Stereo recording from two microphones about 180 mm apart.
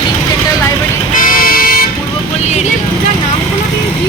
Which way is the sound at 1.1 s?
50° left (ahead or behind).